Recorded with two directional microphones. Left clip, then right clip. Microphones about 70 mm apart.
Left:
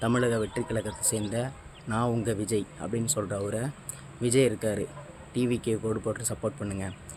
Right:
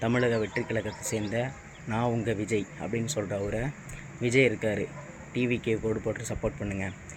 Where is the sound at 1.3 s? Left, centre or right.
Left.